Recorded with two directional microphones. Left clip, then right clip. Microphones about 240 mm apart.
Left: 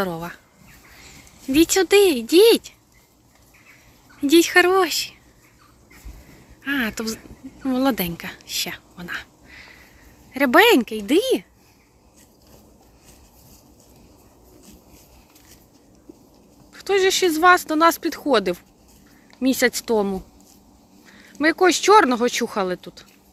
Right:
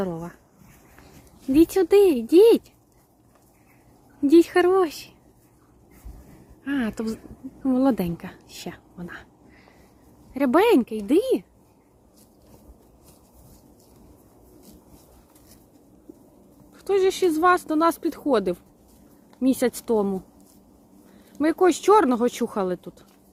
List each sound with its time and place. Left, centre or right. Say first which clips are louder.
0.0 s speech: left 4 dB; centre
1.5 s speech: left 2 dB; centre
4.3 s speech: left 2 dB; centre
6.7 s a woman's voice: left 4 dB; centre
16.7 s speech: left 3 dB; centre
21.3 s speech: left 3 dB; centre